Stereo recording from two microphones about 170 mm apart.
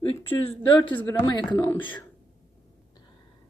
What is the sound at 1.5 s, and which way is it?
Speech, 15° left (ahead or behind).